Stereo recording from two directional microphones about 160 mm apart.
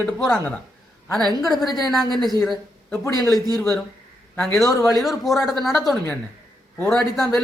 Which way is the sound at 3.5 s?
Centre (ahead or behind).